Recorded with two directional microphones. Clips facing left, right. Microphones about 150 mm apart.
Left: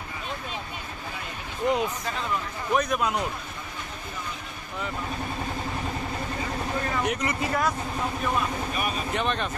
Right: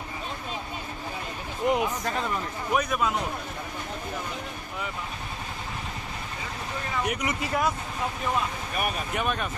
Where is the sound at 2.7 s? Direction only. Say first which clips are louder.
Left 1 dB; 5° right (ahead or behind).